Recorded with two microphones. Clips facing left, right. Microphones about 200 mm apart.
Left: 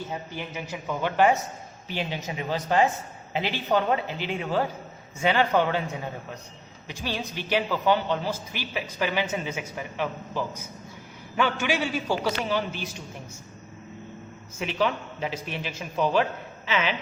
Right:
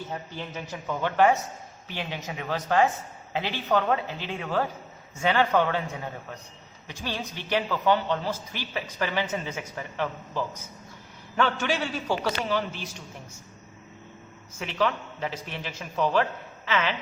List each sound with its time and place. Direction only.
0.1 s a man's voice: 10° left (ahead or behind)
7.0 s a man's voice: 10° left (ahead or behind)
14.6 s a man's voice: 15° left (ahead or behind)